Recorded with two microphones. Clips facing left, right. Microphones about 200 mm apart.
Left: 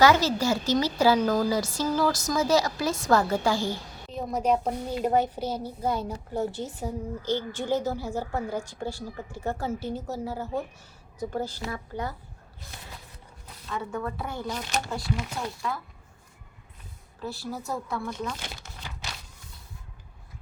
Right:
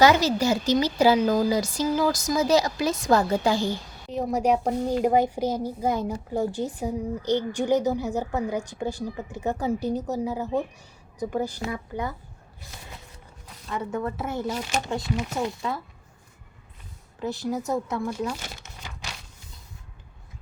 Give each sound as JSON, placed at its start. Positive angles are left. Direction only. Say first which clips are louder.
{"t": 0.0, "sound": "a woman's voice", "louder": "right 2 dB", "side_deg": -15}
{"t": 13.7, "sound": "a woman's voice", "louder": "right 3 dB", "side_deg": -20}
{"t": 14.4, "sound": "speech", "louder": "right 3 dB", "side_deg": -5}
{"t": 17.2, "sound": "a woman's voice", "louder": "right 6 dB", "side_deg": -20}
{"t": 18.1, "sound": "a woman's voice", "louder": "right 4 dB", "side_deg": -10}